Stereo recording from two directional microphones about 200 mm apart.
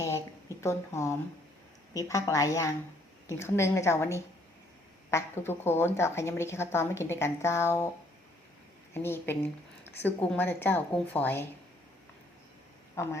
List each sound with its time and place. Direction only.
0.0 s a sound: 15° left (ahead or behind)
2.0 s a woman's voice: 15° left (ahead or behind)
8.9 s a woman's voice: 10° left (ahead or behind)
13.0 s a woman's voice: 15° left (ahead or behind)